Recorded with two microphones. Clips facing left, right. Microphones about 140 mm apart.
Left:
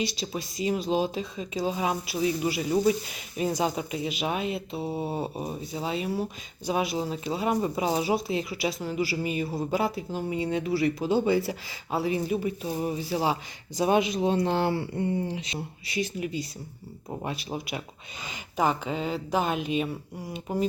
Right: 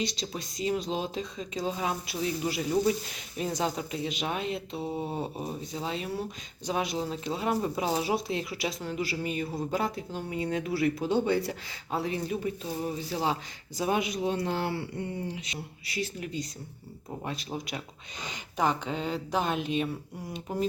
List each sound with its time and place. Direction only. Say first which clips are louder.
0.0 s speech: left 3 dB; 5° left (ahead or behind)
13.7 s speech: left 5 dB; 20° left (ahead or behind)
16.0 s speech: left 4 dB; 5° left (ahead or behind)